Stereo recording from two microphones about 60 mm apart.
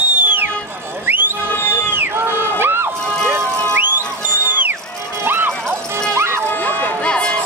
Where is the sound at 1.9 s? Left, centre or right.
Right.